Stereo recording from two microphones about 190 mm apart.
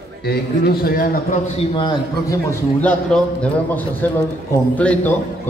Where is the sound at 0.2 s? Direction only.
55° left (ahead or behind).